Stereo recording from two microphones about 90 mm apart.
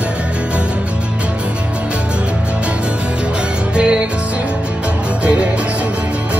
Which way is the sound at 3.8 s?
10° right (ahead or behind).